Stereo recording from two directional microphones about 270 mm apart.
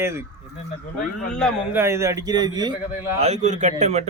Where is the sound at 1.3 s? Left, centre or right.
Centre.